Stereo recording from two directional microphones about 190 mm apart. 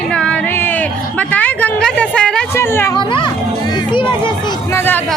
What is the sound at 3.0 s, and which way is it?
Speech, 25° left (ahead or behind).